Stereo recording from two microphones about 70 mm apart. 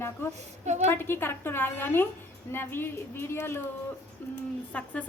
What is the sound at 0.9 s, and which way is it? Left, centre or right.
A woman's voice, left.